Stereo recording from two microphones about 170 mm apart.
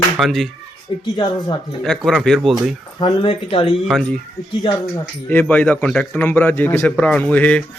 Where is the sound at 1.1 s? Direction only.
25° left (ahead or behind).